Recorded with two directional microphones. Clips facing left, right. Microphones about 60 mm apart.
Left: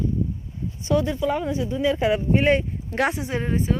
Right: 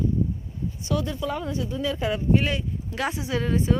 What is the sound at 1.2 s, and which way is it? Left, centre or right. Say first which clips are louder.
Speech: left 5 dB; centre.